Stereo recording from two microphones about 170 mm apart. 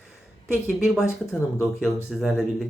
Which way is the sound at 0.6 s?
Centre (ahead or behind).